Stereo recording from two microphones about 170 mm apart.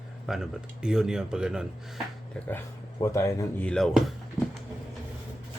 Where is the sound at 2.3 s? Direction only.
10° left (ahead or behind).